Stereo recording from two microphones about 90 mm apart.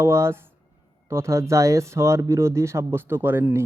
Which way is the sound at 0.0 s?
30° right (ahead or behind).